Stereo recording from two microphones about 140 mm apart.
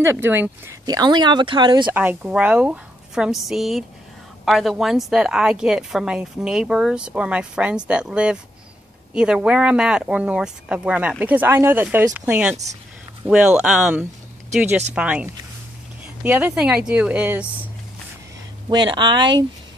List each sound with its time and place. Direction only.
0.0 s speech: 15° right (ahead or behind)
0.8 s speech: 30° right (ahead or behind)
2.0 s a woman's voice: 15° right (ahead or behind)
18.7 s speech: 35° right (ahead or behind)